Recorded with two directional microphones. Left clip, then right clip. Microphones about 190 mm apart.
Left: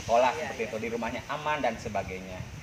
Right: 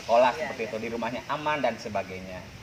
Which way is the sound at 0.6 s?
15° right (ahead or behind).